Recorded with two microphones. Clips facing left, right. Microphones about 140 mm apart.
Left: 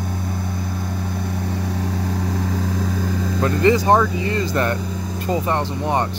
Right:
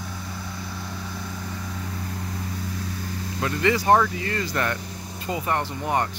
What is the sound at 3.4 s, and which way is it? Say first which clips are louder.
Speech: left 6 dB; 35° left (ahead or behind).